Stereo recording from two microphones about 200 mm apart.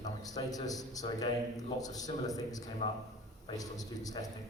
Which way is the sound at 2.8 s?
35° left (ahead or behind).